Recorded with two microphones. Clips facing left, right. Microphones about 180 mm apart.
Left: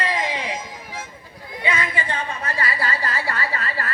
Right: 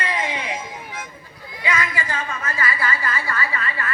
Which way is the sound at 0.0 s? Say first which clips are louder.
Left 1 dB; 35° left (ahead or behind).